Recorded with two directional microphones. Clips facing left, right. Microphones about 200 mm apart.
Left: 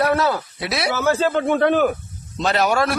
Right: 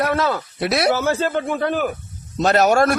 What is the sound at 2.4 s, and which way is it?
Speech, 45° right (ahead or behind).